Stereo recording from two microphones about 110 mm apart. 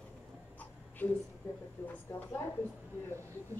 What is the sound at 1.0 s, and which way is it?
Speech, 15° left (ahead or behind).